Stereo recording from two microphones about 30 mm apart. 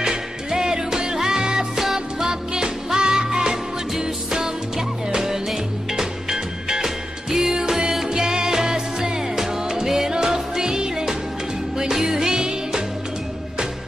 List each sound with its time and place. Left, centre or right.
0.0 s music: right
1.8 s music: centre
2.2 s music: right